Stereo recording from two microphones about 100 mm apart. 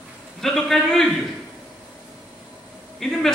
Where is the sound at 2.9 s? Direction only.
5° left (ahead or behind).